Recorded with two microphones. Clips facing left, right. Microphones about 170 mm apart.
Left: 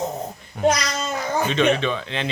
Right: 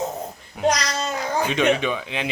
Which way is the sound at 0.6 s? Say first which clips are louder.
Left 1 dB; 5° right (ahead or behind).